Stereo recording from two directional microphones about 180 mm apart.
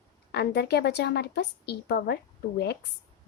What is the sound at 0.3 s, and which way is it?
A woman's voice, 65° left (ahead or behind).